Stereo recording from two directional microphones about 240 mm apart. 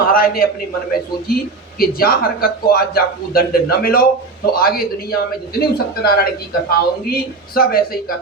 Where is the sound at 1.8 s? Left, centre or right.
Left.